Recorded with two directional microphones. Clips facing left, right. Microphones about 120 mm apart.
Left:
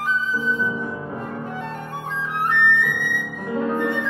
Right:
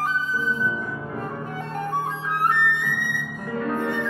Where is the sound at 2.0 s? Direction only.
40° right (ahead or behind).